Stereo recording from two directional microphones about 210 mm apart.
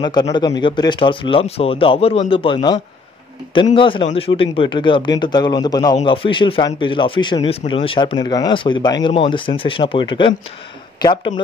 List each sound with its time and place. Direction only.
0.0 s speech: 20° left (ahead or behind)